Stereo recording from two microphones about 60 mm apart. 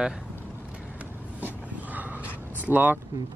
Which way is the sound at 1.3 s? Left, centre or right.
Right.